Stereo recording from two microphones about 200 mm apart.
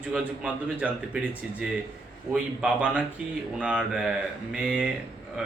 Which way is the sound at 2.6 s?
5° right (ahead or behind).